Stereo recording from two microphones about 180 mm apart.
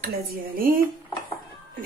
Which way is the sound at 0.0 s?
55° right (ahead or behind).